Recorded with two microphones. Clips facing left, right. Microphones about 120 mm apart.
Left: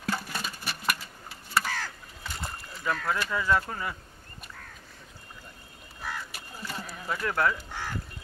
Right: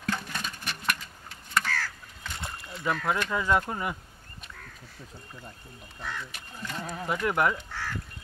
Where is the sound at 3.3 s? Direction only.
20° right (ahead or behind).